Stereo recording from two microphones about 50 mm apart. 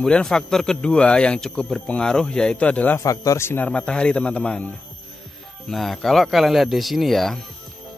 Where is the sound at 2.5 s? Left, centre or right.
Left.